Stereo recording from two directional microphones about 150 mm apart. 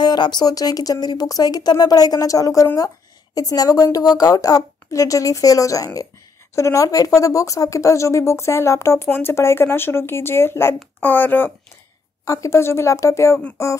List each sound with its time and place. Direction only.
0.0 s speech: 30° left (ahead or behind)